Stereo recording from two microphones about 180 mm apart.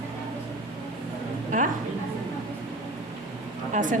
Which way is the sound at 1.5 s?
45° right (ahead or behind).